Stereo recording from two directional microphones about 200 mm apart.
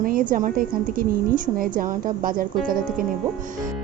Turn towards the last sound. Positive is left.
turn(degrees=-45)  # may be behind; listen again after turning